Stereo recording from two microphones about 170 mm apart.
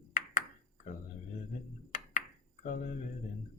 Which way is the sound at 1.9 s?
50° left (ahead or behind).